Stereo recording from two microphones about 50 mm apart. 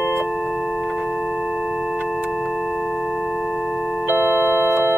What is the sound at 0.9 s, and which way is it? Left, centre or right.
Chirp tone, centre.